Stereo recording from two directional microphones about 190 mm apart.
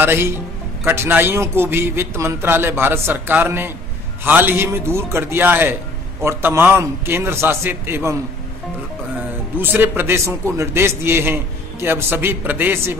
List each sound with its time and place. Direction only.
0.0 s a man's voice: 10° right (ahead or behind)
9.6 s a man's voice: 10° right (ahead or behind)